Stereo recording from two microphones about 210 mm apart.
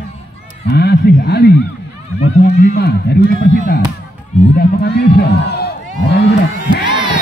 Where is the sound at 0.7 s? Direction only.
50° left (ahead or behind).